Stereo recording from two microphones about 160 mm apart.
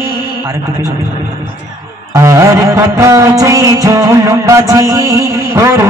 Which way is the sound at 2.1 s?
20° right (ahead or behind).